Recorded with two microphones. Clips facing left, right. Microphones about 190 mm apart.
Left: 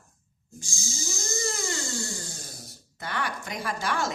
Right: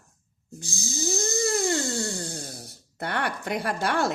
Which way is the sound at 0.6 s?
60° right (ahead or behind).